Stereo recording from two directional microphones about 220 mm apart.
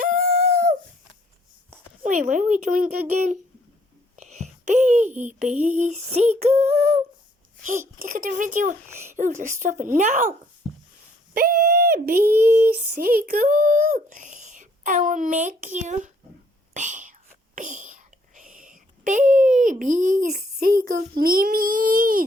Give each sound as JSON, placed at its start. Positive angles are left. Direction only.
{"t": 0.1, "sound": "a sound", "side_deg": -35}
{"t": 2.0, "sound": "a child's voice", "side_deg": -35}
{"t": 8.9, "sound": "speech", "side_deg": -10}
{"t": 9.1, "sound": "speech", "side_deg": -35}
{"t": 11.3, "sound": "speech", "side_deg": -40}
{"t": 12.3, "sound": "speech", "side_deg": -10}
{"t": 12.6, "sound": "speech", "side_deg": -40}
{"t": 16.7, "sound": "whispering", "side_deg": -35}
{"t": 19.8, "sound": "speech", "side_deg": -35}